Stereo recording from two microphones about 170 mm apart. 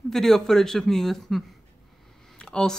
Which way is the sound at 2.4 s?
5° left (ahead or behind).